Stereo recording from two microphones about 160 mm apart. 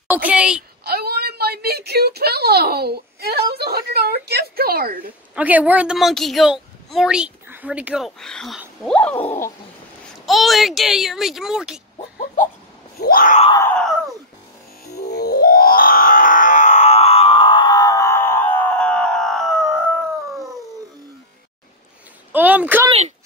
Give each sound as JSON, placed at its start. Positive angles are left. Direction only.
{"t": 0.1, "sound": "speech", "side_deg": -10}
{"t": 0.8, "sound": "a woman's voice", "side_deg": -75}
{"t": 5.3, "sound": "a woman's voice", "side_deg": -10}
{"t": 8.8, "sound": "a sound", "side_deg": 10}
{"t": 9.1, "sound": "a sound", "side_deg": 35}
{"t": 10.2, "sound": "a woman's voice", "side_deg": 0}
{"t": 13.0, "sound": "screaming", "side_deg": 60}
{"t": 13.6, "sound": "a sound", "side_deg": 10}
{"t": 15.0, "sound": "music", "side_deg": 85}
{"t": 22.3, "sound": "speech", "side_deg": -10}
{"t": 22.8, "sound": "speech", "side_deg": -45}